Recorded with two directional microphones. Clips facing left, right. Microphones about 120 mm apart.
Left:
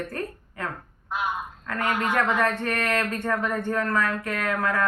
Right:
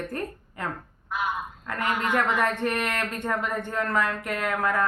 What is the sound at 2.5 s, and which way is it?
Speech, 15° right (ahead or behind).